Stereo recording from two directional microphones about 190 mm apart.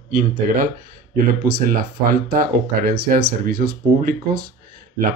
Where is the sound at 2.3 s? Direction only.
50° right (ahead or behind).